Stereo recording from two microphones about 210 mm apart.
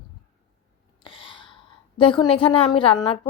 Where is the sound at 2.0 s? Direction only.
25° left (ahead or behind).